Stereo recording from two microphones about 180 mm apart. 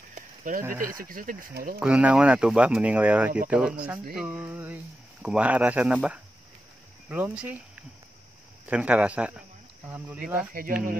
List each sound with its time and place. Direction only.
0.1 s a sound: 50° right (ahead or behind)
0.7 s speech: 15° right (ahead or behind)
1.0 s speech: 50° right (ahead or behind)
1.8 s speech: 5° right (ahead or behind)